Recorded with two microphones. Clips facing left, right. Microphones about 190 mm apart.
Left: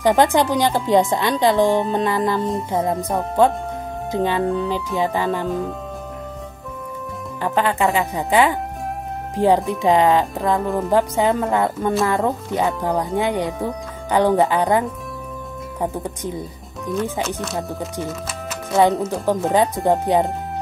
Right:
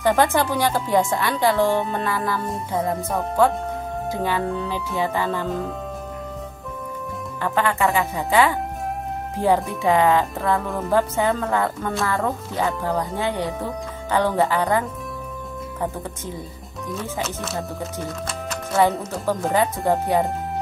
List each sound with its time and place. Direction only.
0.0 s speech: 15° left (ahead or behind)
4.1 s speech: 20° left (ahead or behind)
7.4 s speech: 20° left (ahead or behind)
17.9 s music: 5° left (ahead or behind)
19.2 s speech: 15° left (ahead or behind)